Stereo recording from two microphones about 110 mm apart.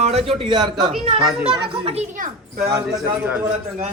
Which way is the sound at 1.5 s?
55° right (ahead or behind).